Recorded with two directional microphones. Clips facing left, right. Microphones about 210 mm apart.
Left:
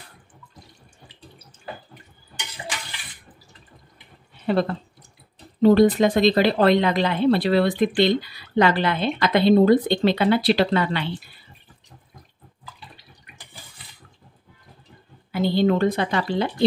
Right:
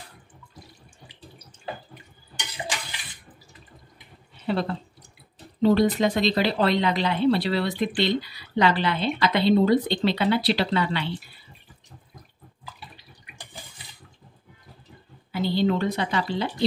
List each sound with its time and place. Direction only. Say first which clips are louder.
4.5 s speech: left 4 dB; 50° left (ahead or behind)
15.3 s speech: left 4 dB; 50° left (ahead or behind)